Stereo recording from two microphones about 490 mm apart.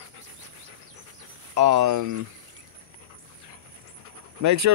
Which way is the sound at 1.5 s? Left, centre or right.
Right.